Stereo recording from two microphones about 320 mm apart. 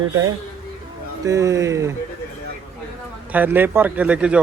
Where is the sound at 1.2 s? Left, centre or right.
Centre.